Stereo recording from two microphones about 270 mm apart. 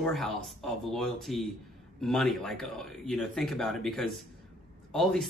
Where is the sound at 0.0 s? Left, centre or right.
Centre.